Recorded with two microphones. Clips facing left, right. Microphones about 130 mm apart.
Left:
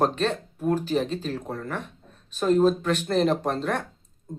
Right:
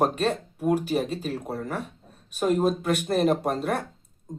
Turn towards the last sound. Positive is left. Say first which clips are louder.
# even
turn(degrees=-10)  # may be behind; listen again after turning